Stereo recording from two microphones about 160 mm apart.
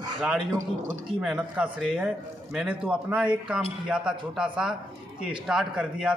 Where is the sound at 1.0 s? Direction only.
5° right (ahead or behind).